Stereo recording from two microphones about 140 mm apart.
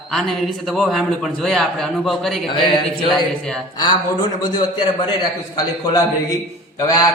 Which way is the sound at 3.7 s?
30° left (ahead or behind).